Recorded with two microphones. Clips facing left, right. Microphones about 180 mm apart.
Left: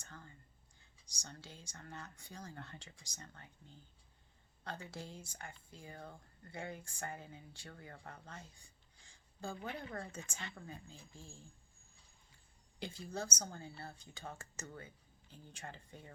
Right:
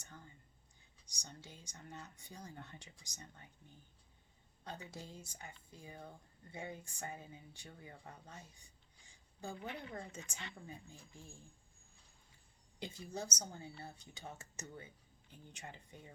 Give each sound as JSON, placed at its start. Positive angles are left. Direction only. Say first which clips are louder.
{"t": 0.0, "sound": "speech", "louder": "left 1 dB", "side_deg": -15}
{"t": 4.6, "sound": "speech", "louder": "left 2 dB", "side_deg": -20}
{"t": 8.4, "sound": "a sound", "louder": "left 2 dB", "side_deg": -20}
{"t": 10.1, "sound": "speech", "louder": "left 2 dB", "side_deg": -20}
{"t": 12.8, "sound": "speech", "louder": "left 1 dB", "side_deg": -20}